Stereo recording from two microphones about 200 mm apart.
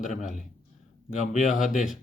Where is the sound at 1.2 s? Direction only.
40° left (ahead or behind).